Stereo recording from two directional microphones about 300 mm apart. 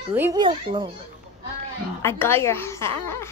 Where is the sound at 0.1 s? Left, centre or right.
Centre.